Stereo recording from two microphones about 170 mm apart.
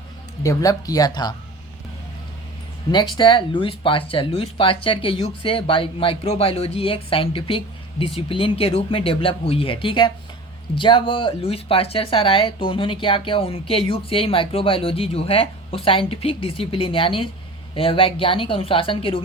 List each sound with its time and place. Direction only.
0.4 s speech: 20° left (ahead or behind)
2.9 s speech: 25° left (ahead or behind)